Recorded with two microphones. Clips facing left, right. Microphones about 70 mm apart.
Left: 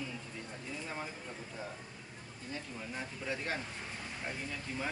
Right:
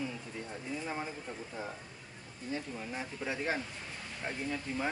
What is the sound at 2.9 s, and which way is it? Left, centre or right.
Speech, centre.